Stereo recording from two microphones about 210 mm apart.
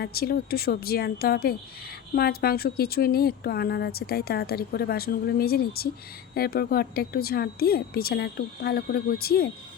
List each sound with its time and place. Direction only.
0.0 s speech: 45° left (ahead or behind)